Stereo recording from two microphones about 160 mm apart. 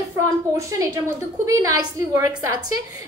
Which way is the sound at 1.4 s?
20° right (ahead or behind).